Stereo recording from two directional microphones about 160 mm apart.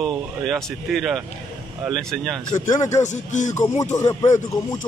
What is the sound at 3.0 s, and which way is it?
Speech, 50° left (ahead or behind).